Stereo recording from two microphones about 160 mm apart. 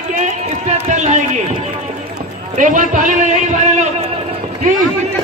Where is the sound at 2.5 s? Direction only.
55° right (ahead or behind).